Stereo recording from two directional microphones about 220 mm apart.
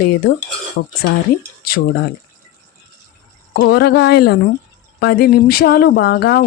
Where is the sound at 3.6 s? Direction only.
45° left (ahead or behind).